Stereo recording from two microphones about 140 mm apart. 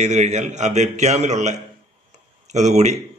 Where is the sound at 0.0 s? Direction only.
55° right (ahead or behind).